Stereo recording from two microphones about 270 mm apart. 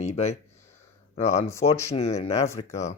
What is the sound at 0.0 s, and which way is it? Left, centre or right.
Speech, left.